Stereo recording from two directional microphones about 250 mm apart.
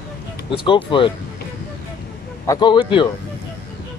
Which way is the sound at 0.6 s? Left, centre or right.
Centre.